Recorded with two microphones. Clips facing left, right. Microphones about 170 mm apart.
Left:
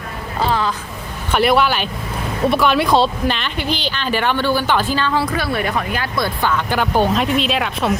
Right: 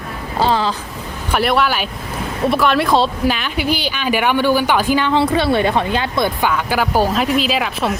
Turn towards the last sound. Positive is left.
turn(degrees=0)  # may be behind; listen again after turning